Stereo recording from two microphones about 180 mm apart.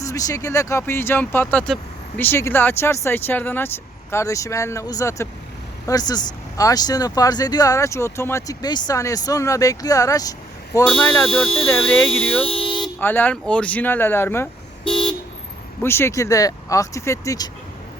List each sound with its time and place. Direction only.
0.0 s speech: 20° left (ahead or behind)
10.8 s speech: 5° left (ahead or behind)
12.5 s vehicle: 30° left (ahead or behind)
13.0 s speech: 10° left (ahead or behind)
14.8 s car: 30° left (ahead or behind)
15.8 s speech: 15° left (ahead or behind)